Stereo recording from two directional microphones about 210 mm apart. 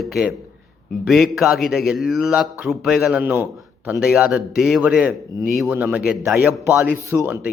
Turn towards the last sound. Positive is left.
turn(degrees=-10)  # may be behind; listen again after turning